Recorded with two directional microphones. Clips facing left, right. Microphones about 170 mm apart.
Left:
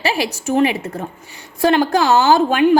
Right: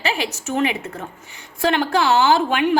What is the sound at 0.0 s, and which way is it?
A woman's voice, 35° left (ahead or behind).